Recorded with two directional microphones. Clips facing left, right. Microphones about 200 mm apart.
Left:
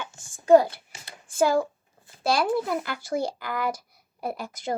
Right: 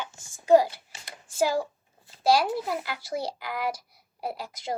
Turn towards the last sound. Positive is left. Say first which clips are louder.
# left 3 dB
turn(degrees=50)  # may be behind; listen again after turning